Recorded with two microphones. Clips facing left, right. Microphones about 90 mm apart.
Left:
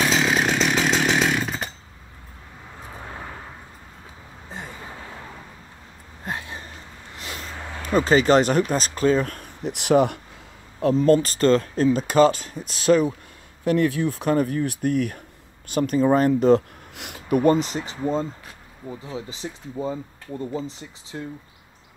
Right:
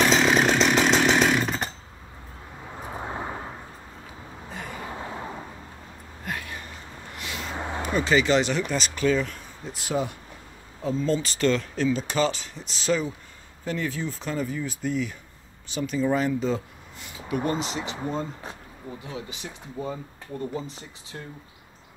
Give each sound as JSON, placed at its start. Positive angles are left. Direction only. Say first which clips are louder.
{"t": 0.0, "sound": "chainsaw", "louder": "right 1 dB", "side_deg": 0}
{"t": 2.8, "sound": "vehicle", "louder": "right 4 dB", "side_deg": -20}
{"t": 4.7, "sound": "a sound", "louder": "right 4 dB", "side_deg": -25}
{"t": 6.2, "sound": "a sound", "louder": "left 2 dB", "side_deg": 25}
{"t": 7.2, "sound": "vehicle", "louder": "even", "side_deg": 40}
{"t": 7.5, "sound": "a sound", "louder": "right 4 dB", "side_deg": -20}
{"t": 7.8, "sound": "speech", "louder": "left 5 dB", "side_deg": 40}
{"t": 9.3, "sound": "speech", "louder": "left 7 dB", "side_deg": 65}
{"t": 11.3, "sound": "speech", "louder": "left 5 dB", "side_deg": 40}
{"t": 17.5, "sound": "speech", "louder": "left 10 dB", "side_deg": 45}
{"t": 19.1, "sound": "speech", "louder": "left 4 dB", "side_deg": 30}